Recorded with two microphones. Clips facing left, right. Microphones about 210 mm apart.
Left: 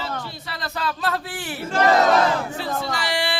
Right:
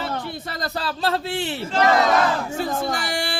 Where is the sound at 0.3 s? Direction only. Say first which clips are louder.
Right 4 dB; 45° right (ahead or behind); by 1.6 s 25° right (ahead or behind).